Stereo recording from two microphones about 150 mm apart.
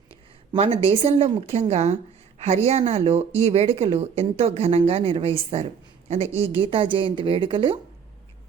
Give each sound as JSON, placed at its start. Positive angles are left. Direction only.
{"t": 0.5, "sound": "speech", "side_deg": -40}